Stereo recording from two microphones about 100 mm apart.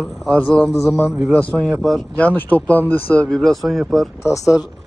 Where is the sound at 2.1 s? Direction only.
15° left (ahead or behind).